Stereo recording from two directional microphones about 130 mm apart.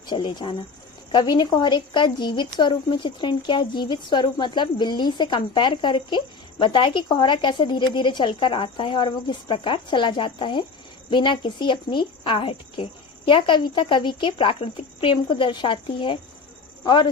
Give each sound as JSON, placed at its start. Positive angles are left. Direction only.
{"t": 0.1, "sound": "a woman's voice", "side_deg": 35}